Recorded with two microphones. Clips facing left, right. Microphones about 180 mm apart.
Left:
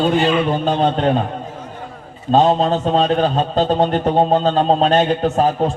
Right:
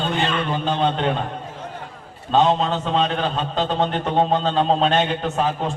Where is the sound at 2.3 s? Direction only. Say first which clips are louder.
Left 4 dB; 40° left (ahead or behind).